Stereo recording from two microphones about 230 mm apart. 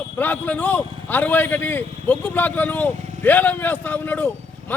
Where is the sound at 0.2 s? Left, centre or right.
Centre.